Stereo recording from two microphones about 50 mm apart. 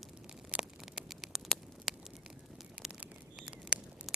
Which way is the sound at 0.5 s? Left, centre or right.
Right.